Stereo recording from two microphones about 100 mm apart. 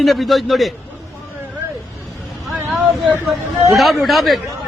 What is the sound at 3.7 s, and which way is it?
Speech, centre (ahead or behind).